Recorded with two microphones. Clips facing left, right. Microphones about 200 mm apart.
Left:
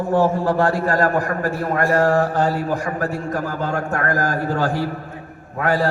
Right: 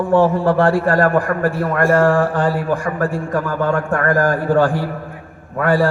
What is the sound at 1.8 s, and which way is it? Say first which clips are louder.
Mantra: right 4 dB; 50° right (ahead or behind).